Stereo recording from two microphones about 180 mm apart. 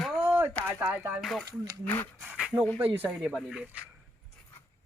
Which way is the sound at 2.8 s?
10° right (ahead or behind).